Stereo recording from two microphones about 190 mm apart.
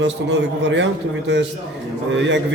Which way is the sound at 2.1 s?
75° right (ahead or behind).